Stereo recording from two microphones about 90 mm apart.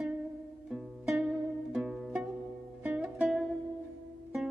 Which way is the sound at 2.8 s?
15° right (ahead or behind).